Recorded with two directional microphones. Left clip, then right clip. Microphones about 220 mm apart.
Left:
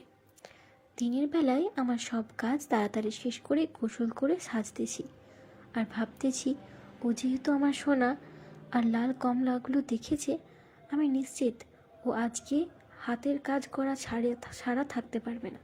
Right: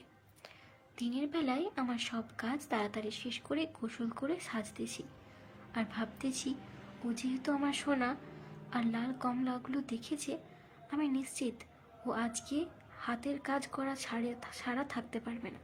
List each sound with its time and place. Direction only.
0.9 s a woman's voice: 20° left (ahead or behind)